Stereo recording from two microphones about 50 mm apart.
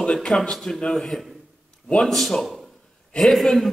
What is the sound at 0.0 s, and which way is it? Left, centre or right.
Speech, centre.